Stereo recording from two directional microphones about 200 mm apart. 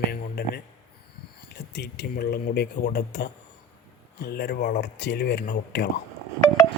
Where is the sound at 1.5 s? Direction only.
55° left (ahead or behind).